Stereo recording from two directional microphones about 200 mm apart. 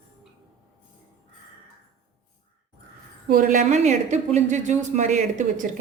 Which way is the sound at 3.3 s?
40° right (ahead or behind).